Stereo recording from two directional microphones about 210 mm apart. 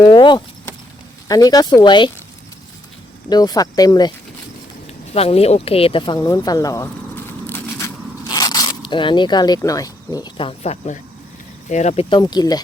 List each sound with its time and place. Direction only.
0.0 s speech: 20° left (ahead or behind)
3.2 s speech: 20° left (ahead or behind)
5.1 s speech: 30° left (ahead or behind)
6.1 s a sound: 15° left (ahead or behind); by 11.0 s 30° left (ahead or behind)
11.7 s speech: 35° left (ahead or behind)